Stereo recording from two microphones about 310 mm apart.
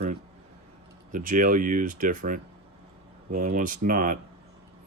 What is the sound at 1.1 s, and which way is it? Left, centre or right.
Speech, right.